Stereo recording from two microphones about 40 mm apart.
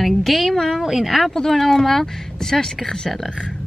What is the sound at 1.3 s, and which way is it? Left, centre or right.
Speech, centre.